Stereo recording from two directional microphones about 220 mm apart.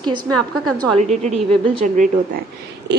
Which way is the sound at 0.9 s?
30° right (ahead or behind).